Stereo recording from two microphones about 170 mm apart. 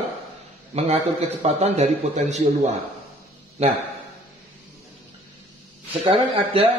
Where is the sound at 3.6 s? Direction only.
40° right (ahead or behind).